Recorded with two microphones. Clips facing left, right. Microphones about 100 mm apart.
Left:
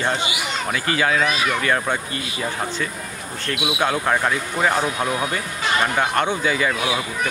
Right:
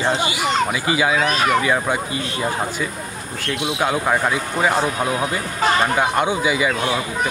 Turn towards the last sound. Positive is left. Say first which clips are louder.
# right 2 dB
turn(degrees=-10)  # may be behind; listen again after turning